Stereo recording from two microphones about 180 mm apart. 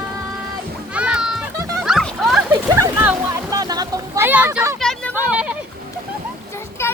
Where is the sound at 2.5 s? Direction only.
20° right (ahead or behind).